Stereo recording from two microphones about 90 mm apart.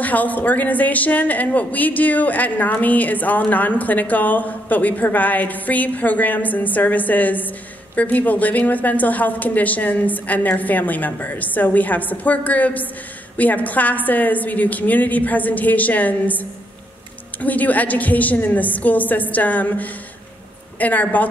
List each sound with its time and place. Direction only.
0.0 s a woman's voice: 20° left (ahead or behind)